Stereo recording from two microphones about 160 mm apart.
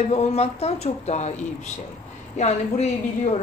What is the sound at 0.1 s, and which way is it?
A woman's voice, 40° left (ahead or behind).